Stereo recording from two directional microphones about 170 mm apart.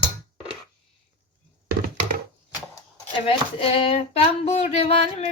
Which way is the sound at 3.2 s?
30° left (ahead or behind).